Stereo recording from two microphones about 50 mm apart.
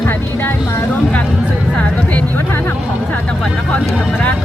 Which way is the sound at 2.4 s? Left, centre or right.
Left.